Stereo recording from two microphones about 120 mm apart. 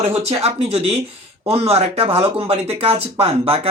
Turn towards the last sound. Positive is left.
turn(degrees=-55)  # may be behind; listen again after turning